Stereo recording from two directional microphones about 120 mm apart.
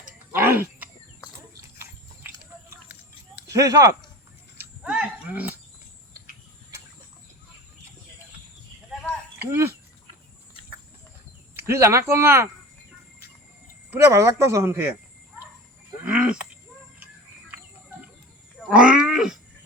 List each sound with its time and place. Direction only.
0.4 s wild animals: 15° right (ahead or behind)
2.6 s a sound: 15° right (ahead or behind)
3.5 s speech: 30° right (ahead or behind)
4.5 s a sound: 10° right (ahead or behind)
8.9 s a sound: 5° right (ahead or behind)
9.4 s speech: 20° right (ahead or behind)
11.5 s speech: 20° right (ahead or behind)
13.9 s speech: 25° right (ahead or behind)
16.0 s goat: 10° right (ahead or behind)
18.7 s wild animals: 10° right (ahead or behind)